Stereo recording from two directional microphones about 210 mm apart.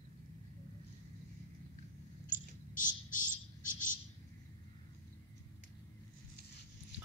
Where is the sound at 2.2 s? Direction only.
40° left (ahead or behind).